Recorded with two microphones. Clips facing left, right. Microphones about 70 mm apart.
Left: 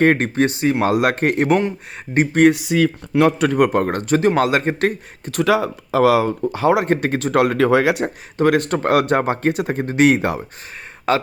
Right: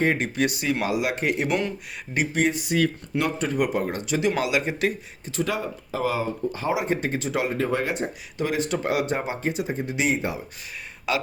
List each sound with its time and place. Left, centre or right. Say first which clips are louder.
0.0 s speech: left 8 dB; left
0.3 s speech: left 7 dB; left
0.9 s a man's voice: left 7 dB; left
2.5 s speech: left 9 dB; left
3.2 s a man's voice: left 8 dB; left
5.4 s speech: left 10 dB; left
6.7 s speech: left 7 dB; left
8.4 s speech: left 9 dB; left
11.1 s a man's voice: left 8 dB; left